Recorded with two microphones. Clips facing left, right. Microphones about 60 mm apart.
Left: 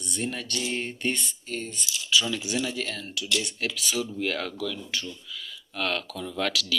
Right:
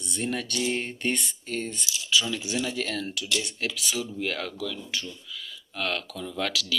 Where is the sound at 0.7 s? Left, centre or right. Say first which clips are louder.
Left 2 dB; right.